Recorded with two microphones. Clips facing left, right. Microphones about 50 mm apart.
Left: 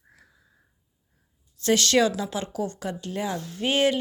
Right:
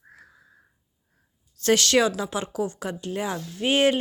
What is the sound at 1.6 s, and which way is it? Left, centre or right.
Speech, right.